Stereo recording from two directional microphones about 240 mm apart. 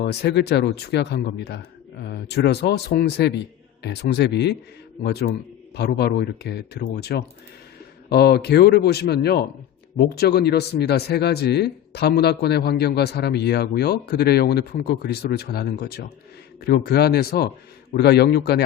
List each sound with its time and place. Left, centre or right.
0.0 s speech: left